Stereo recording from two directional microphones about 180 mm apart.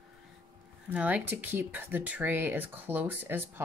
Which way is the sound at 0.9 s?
5° right (ahead or behind).